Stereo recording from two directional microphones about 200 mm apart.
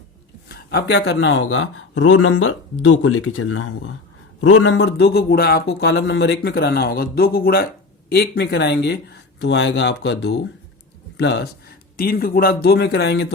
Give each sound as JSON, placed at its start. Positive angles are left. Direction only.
{"t": 0.4, "sound": "speech", "side_deg": 50}
{"t": 4.4, "sound": "a man's voice", "side_deg": 70}